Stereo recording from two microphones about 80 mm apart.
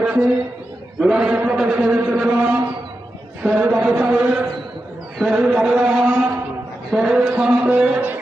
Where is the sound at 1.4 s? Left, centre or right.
Centre.